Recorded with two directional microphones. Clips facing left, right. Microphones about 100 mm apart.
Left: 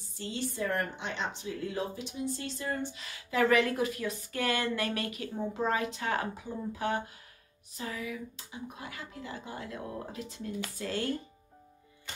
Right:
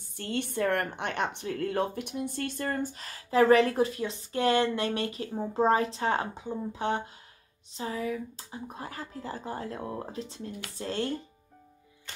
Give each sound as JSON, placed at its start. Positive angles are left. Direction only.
{"t": 0.2, "sound": "speech", "side_deg": -60}